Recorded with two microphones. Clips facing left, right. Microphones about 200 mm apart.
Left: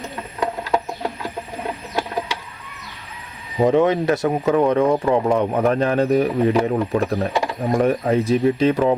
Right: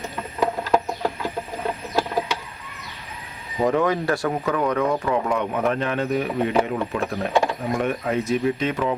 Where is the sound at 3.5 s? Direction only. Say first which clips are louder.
Left 5 dB; 25° left (ahead or behind).